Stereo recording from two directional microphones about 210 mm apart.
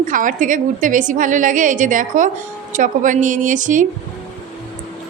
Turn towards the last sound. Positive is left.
turn(degrees=-40)  # may be behind; listen again after turning